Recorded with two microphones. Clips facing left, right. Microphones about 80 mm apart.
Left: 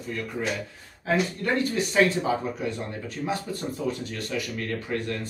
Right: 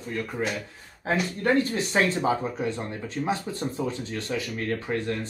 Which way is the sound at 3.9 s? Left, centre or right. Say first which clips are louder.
Even; right.